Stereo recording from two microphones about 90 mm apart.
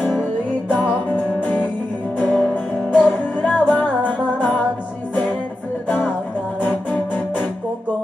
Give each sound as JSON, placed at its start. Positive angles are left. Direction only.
{"t": 0.7, "sound": "music", "side_deg": 15}